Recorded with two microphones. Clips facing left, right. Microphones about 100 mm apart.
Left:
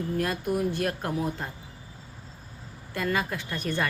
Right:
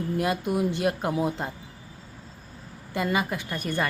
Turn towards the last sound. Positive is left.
turn(degrees=-10)  # may be behind; listen again after turning